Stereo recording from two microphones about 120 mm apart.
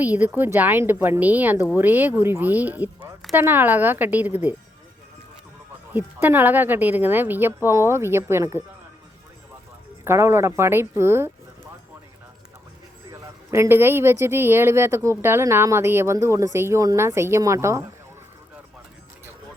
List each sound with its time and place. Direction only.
0.0 s speech: 15° right (ahead or behind)
5.9 s speech: 15° right (ahead or behind)
10.0 s speech: 20° right (ahead or behind)
13.1 s speech: 20° right (ahead or behind)